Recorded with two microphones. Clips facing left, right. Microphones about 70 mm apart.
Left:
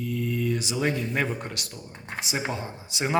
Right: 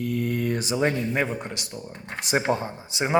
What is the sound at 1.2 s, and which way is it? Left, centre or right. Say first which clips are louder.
Speech: right 2 dB; centre.